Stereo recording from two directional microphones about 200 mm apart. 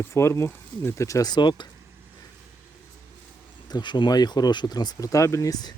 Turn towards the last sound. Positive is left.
turn(degrees=20)  # may be behind; listen again after turning